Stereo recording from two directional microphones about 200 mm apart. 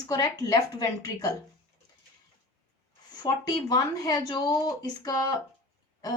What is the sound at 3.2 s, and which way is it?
A woman's voice, 20° left (ahead or behind).